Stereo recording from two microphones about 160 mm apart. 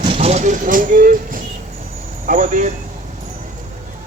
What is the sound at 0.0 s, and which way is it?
A man's voice, 35° right (ahead or behind).